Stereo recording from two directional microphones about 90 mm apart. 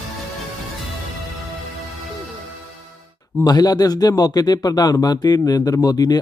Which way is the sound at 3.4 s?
45° left (ahead or behind).